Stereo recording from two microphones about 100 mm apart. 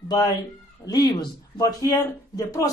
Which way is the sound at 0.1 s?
40° left (ahead or behind).